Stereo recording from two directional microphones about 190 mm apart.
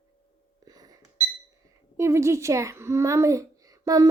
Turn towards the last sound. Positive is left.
turn(degrees=-20)  # may be behind; listen again after turning